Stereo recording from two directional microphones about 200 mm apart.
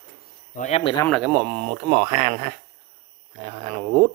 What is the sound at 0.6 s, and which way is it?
Speech, 30° left (ahead or behind).